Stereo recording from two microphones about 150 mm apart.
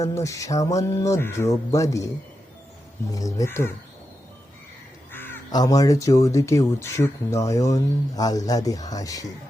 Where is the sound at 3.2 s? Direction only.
25° left (ahead or behind).